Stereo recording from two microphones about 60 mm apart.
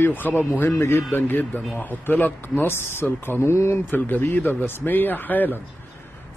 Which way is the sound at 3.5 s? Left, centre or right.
Left.